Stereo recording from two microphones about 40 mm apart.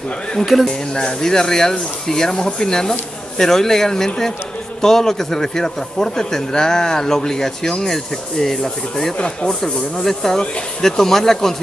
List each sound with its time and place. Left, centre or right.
0.5 s speech: centre
0.9 s speech: centre
9.2 s speech: left
9.6 s speech: centre